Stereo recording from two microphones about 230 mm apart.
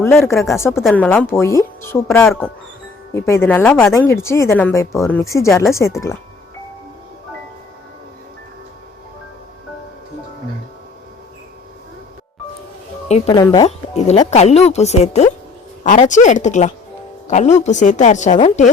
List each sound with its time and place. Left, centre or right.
0.0 s speech: centre
3.1 s speech: centre
13.2 s speech: centre
13.7 s a woman's voice: left